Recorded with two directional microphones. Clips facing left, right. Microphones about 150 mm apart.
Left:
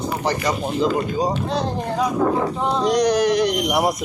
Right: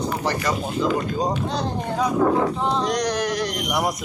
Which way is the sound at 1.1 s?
10° left (ahead or behind).